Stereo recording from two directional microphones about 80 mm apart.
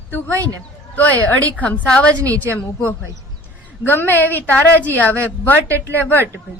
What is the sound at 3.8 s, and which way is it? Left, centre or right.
A woman's voice, left.